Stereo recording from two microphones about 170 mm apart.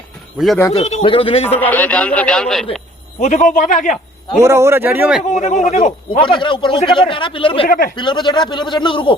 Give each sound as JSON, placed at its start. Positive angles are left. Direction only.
{"t": 0.3, "sound": "speech", "side_deg": 0}
{"t": 0.7, "sound": "speech", "side_deg": 40}
{"t": 1.5, "sound": "a man's voice", "side_deg": 10}
{"t": 3.2, "sound": "a man's voice", "side_deg": 45}
{"t": 4.4, "sound": "speech", "side_deg": -15}
{"t": 5.3, "sound": "a man's voice", "side_deg": 45}
{"t": 6.1, "sound": "speech", "side_deg": 30}
{"t": 7.7, "sound": "speech", "side_deg": 60}
{"t": 7.9, "sound": "a man's voice", "side_deg": 25}